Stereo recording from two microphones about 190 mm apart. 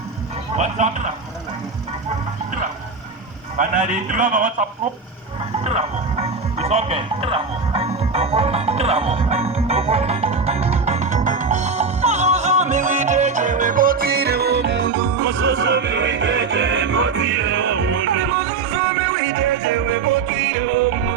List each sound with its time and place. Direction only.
0.5 s speech: 40° right (ahead or behind)
3.6 s speech: 40° right (ahead or behind)
5.6 s music: 35° right (ahead or behind); by 19.8 s 75° right (ahead or behind)